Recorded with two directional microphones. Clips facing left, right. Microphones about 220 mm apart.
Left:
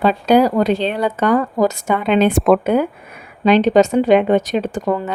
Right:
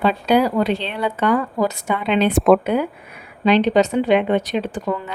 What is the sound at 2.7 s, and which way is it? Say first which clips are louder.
Speech: left 4 dB; 45° left (ahead or behind).